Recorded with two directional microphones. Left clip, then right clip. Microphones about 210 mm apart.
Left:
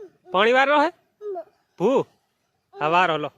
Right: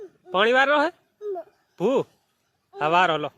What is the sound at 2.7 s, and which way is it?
Speech, 5° left (ahead or behind).